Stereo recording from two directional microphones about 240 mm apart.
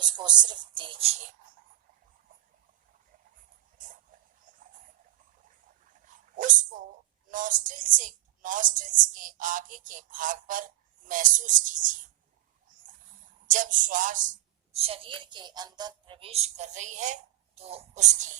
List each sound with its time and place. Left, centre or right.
0.0 s a woman's voice: centre
6.3 s a woman's voice: right
13.5 s a woman's voice: right